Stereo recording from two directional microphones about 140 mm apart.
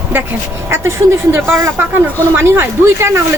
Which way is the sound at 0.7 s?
15° right (ahead or behind).